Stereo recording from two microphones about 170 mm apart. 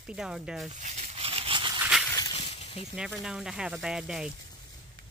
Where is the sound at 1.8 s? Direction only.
5° right (ahead or behind).